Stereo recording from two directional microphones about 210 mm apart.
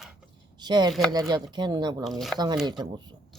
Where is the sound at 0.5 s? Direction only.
20° right (ahead or behind).